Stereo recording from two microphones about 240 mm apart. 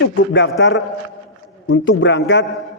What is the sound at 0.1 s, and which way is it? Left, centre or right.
Speech, left.